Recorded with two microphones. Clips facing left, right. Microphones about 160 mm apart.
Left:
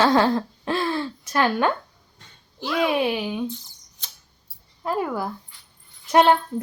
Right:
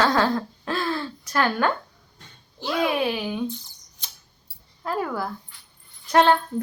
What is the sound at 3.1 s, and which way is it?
Speech, 15° left (ahead or behind).